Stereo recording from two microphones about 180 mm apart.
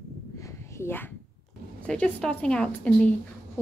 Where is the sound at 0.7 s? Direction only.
15° left (ahead or behind).